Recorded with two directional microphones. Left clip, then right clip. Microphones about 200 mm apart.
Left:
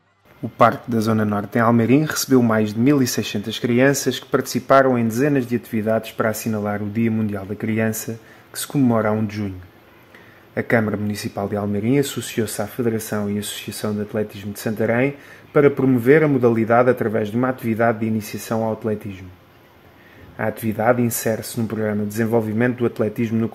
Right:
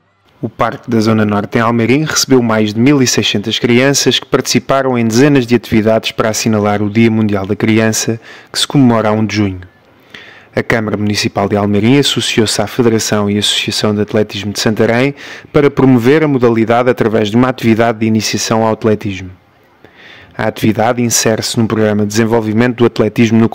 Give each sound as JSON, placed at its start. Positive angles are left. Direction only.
{"t": 0.6, "sound": "speech", "side_deg": -25}
{"t": 10.5, "sound": "speech", "side_deg": -40}
{"t": 20.3, "sound": "speech", "side_deg": -50}